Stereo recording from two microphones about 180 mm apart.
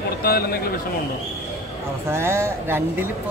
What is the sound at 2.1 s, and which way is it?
Speech, 15° right (ahead or behind).